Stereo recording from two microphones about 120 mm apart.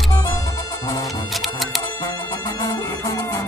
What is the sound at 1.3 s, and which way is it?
Music, centre (ahead or behind).